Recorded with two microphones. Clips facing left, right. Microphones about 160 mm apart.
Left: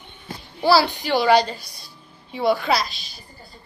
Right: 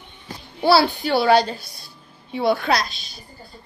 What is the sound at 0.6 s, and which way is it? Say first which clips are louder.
A woman's voice: right 1 dB; 5° right (ahead or behind).